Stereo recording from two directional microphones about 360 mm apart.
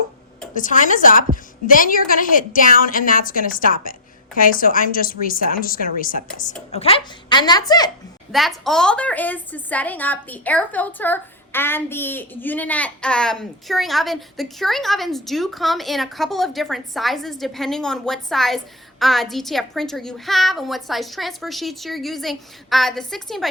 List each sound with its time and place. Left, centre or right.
0.5 s a woman's voice: left
8.3 s speech: centre